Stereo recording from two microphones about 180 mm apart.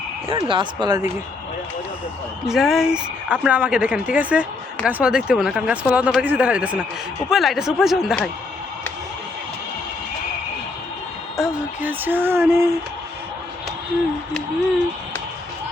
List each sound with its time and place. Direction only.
0.3 s speech: 30° right (ahead or behind)
2.5 s speech: centre (ahead or behind)
11.3 s speech: 5° right (ahead or behind)